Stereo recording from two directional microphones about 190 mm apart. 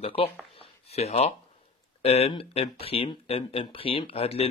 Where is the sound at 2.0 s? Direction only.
30° left (ahead or behind).